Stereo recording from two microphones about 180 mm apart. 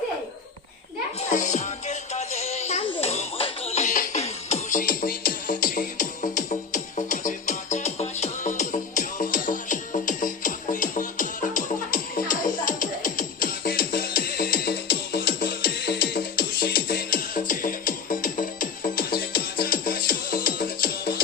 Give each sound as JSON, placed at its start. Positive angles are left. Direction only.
{"t": 1.3, "sound": "music", "side_deg": 40}
{"t": 4.8, "sound": "music", "side_deg": 50}